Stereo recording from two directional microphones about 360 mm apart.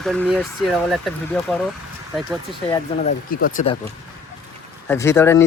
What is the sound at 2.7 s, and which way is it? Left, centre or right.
Speech, left.